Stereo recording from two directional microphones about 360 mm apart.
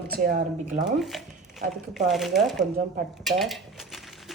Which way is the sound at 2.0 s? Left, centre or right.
Centre.